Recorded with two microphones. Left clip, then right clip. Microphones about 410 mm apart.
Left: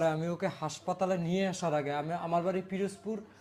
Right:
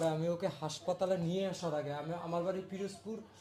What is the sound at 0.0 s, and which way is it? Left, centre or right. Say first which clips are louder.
A man's voice: left 3 dB; left.